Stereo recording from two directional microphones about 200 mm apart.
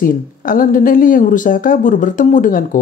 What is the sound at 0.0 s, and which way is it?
Speech, 45° left (ahead or behind).